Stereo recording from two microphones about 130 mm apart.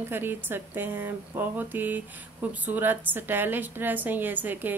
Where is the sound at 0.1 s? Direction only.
15° right (ahead or behind).